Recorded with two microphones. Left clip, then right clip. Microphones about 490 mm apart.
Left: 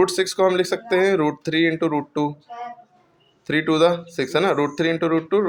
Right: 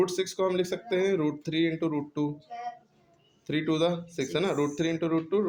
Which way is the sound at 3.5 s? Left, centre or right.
Right.